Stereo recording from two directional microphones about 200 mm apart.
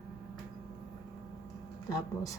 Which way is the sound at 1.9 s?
15° left (ahead or behind).